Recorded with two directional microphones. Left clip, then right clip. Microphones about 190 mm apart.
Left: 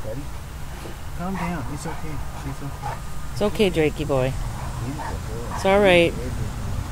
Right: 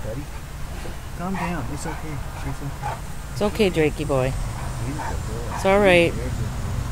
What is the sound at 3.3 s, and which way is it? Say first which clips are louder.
Speech: even; 10° left (ahead or behind).